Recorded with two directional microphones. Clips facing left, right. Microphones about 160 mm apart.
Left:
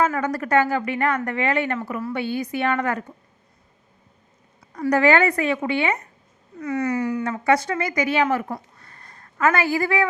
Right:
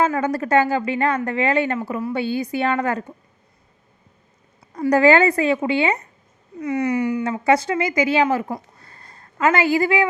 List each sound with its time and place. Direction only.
0.2 s a woman's voice: 25° right (ahead or behind)
1.9 s a woman's voice: 20° right (ahead or behind)
2.1 s a woman's voice: 30° right (ahead or behind)
4.7 s a woman's voice: 30° right (ahead or behind)
6.6 s speech: 15° right (ahead or behind)
7.4 s a woman's voice: 25° right (ahead or behind)
8.8 s a sound: 30° right (ahead or behind)